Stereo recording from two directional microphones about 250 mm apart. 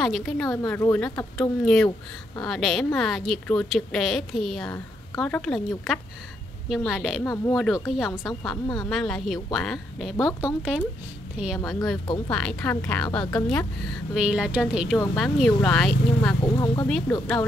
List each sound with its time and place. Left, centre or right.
0.0 s a woman's voice: centre
4.6 s a sound: centre
5.2 s a woman's voice: centre